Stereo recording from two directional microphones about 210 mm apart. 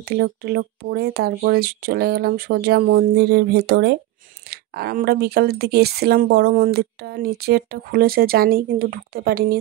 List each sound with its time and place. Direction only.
0.0 s speech: 50° right (ahead or behind)